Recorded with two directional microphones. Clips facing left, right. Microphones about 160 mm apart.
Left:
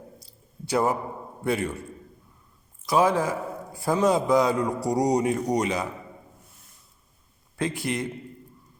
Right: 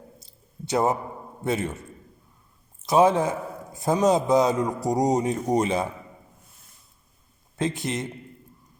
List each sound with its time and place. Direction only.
0.2 s a sound: 20° right (ahead or behind)
1.5 s a man's voice: 20° right (ahead or behind)
2.8 s a man's voice: 20° right (ahead or behind)
7.5 s a man's voice: 20° right (ahead or behind)